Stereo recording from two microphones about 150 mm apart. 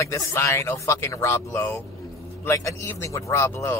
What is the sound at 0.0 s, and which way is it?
Speech, 20° left (ahead or behind).